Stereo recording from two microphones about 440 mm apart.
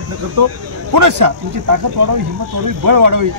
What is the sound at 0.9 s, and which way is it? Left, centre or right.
Speech, right.